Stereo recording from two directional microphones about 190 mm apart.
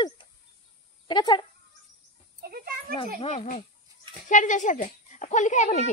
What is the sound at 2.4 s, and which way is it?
Speech, 50° right (ahead or behind).